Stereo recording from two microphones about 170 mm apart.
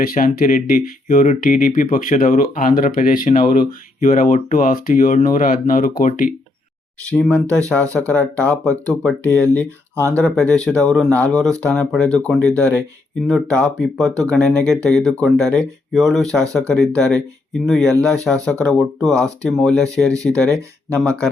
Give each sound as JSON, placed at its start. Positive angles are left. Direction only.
{"t": 0.0, "sound": "speech", "side_deg": 55}
{"t": 7.1, "sound": "speech", "side_deg": 10}
{"t": 9.9, "sound": "speech", "side_deg": -15}
{"t": 10.2, "sound": "speech", "side_deg": 5}
{"t": 20.5, "sound": "speech", "side_deg": -15}